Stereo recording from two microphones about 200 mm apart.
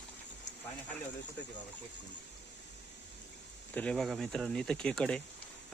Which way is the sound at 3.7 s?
5° left (ahead or behind).